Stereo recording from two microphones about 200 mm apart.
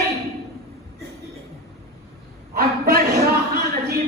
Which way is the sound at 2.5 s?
50° right (ahead or behind).